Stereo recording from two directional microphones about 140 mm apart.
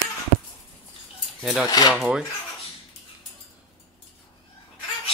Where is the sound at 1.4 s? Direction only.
Centre (ahead or behind).